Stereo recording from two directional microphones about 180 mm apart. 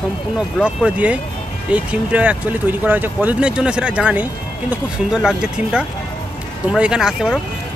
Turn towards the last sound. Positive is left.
turn(degrees=-5)  # may be behind; listen again after turning